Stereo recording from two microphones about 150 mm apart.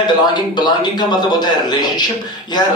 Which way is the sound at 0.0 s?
30° left (ahead or behind).